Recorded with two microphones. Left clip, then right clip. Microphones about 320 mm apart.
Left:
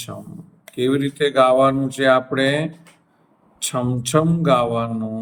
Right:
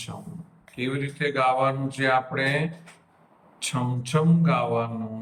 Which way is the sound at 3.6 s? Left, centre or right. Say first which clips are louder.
Left 6 dB; centre.